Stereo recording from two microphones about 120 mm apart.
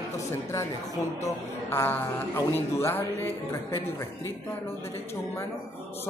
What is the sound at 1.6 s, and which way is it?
A man's voice, 20° left (ahead or behind).